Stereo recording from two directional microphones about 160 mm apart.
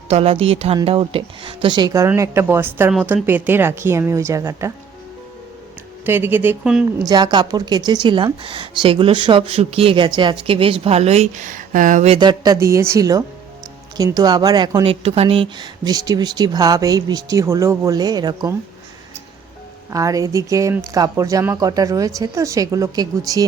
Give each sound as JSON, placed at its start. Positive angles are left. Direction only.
{"t": 0.1, "sound": "a woman's voice", "side_deg": -40}
{"t": 6.1, "sound": "a woman's voice", "side_deg": -15}
{"t": 7.0, "sound": "speech", "side_deg": -25}
{"t": 12.1, "sound": "speech", "side_deg": -30}
{"t": 14.8, "sound": "speech", "side_deg": -35}
{"t": 19.9, "sound": "speech", "side_deg": -20}